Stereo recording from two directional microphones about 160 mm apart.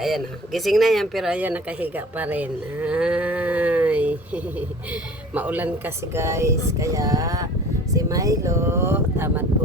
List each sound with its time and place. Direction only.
0.0 s speech: centre (ahead or behind)
5.3 s speech: 10° right (ahead or behind)